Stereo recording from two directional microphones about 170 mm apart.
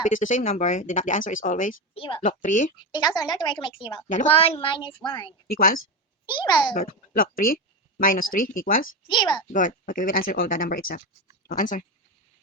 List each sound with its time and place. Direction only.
0.1 s speech: 50° left (ahead or behind)
2.0 s a woman's voice: 30° left (ahead or behind)
2.2 s speech: 50° left (ahead or behind)
2.9 s a woman's voice: 20° left (ahead or behind)
5.5 s a woman's voice: 60° left (ahead or behind)
6.2 s a woman's voice: 25° left (ahead or behind)
6.7 s speech: 55° left (ahead or behind)
9.0 s a woman's voice: 25° left (ahead or behind)
9.5 s speech: 50° left (ahead or behind)